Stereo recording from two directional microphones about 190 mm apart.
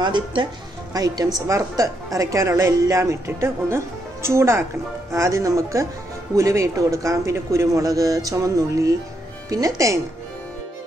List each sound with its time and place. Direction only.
0.0 s speech: 25° right (ahead or behind)